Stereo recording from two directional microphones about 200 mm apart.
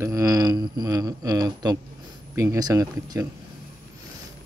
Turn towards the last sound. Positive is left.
turn(degrees=-15)  # may be behind; listen again after turning